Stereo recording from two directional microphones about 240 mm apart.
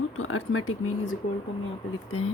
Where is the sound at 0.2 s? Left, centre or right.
Left.